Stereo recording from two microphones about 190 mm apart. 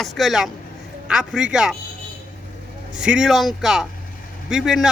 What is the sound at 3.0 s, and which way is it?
A man's voice, 5° right (ahead or behind).